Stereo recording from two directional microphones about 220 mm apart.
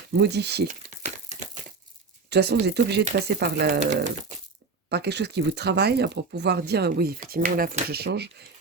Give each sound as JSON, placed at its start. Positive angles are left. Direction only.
{"t": 0.2, "sound": "speech", "side_deg": -50}
{"t": 2.3, "sound": "speech", "side_deg": -50}
{"t": 3.8, "sound": "speech", "side_deg": -30}
{"t": 4.9, "sound": "speech", "side_deg": -50}